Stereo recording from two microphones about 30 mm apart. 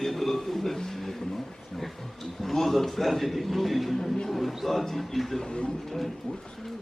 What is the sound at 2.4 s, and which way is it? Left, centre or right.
A man's voice, centre.